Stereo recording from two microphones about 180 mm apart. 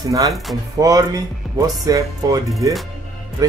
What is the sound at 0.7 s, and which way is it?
Speech, 20° right (ahead or behind).